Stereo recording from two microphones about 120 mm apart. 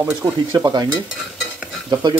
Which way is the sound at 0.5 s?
35° right (ahead or behind).